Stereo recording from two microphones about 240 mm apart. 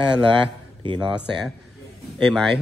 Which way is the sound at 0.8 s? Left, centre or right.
Centre.